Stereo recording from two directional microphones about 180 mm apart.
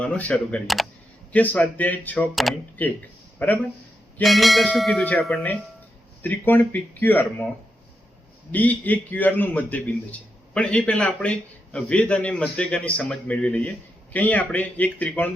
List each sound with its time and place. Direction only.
0.0 s a man's voice: 5° left (ahead or behind)
8.5 s a man's voice: 10° left (ahead or behind)